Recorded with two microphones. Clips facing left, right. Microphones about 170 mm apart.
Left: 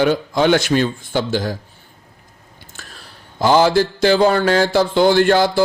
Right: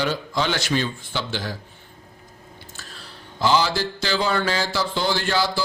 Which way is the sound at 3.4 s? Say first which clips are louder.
Left 7 dB; 50° left (ahead or behind).